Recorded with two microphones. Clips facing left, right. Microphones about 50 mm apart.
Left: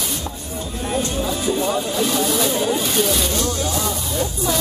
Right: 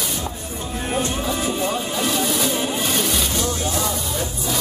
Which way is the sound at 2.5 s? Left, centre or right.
Centre.